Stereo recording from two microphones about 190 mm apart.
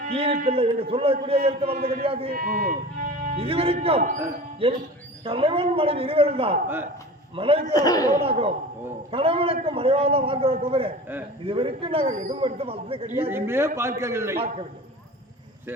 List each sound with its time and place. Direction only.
0.0 s a man's voice: 30° right (ahead or behind)
2.3 s speech: 50° right (ahead or behind)
3.3 s a man's voice: 30° right (ahead or behind)
7.7 s speech: 20° left (ahead or behind)
8.2 s a man's voice: 30° right (ahead or behind)
13.3 s a man's voice: 15° right (ahead or behind)